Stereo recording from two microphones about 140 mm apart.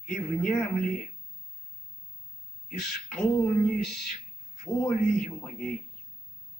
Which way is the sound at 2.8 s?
5° left (ahead or behind).